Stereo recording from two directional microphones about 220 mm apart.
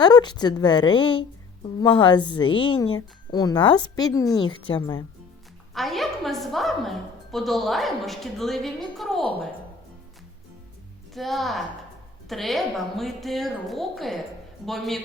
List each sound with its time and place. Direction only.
0.0 s a woman's voice: 20° left (ahead or behind)
5.7 s a woman's voice: centre (ahead or behind)
11.1 s a woman's voice: centre (ahead or behind)